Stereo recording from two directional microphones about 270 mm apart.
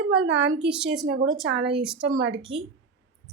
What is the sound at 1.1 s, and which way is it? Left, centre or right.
Speech, right.